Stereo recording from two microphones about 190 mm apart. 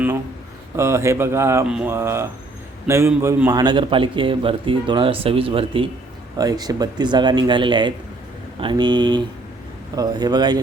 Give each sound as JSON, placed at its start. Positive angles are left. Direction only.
{"t": 0.8, "sound": "a man's voice", "side_deg": -15}